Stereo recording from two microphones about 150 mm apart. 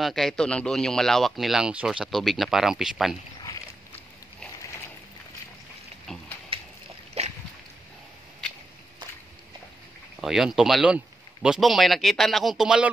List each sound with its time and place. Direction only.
0.0 s speech: centre (ahead or behind)
6.1 s a sound: 5° left (ahead or behind)
7.2 s boat: 45° right (ahead or behind)
10.2 s speech: centre (ahead or behind)